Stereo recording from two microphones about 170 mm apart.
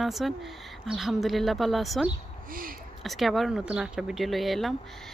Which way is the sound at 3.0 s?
Centre (ahead or behind).